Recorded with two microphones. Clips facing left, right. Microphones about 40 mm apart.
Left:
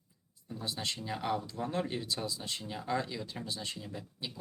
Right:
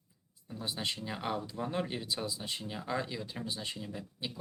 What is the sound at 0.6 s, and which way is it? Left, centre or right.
Speech, centre.